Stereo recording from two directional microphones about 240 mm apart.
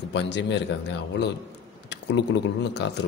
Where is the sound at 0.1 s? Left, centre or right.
Left.